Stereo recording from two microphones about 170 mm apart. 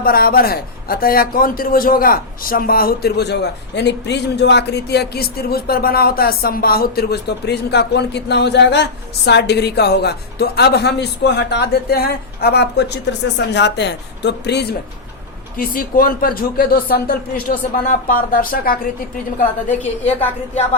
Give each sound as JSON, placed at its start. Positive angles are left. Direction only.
{"t": 0.0, "sound": "a man's voice", "side_deg": 60}
{"t": 3.8, "sound": "speech", "side_deg": 85}
{"t": 13.5, "sound": "speech", "side_deg": 90}
{"t": 15.5, "sound": "a man's voice", "side_deg": 55}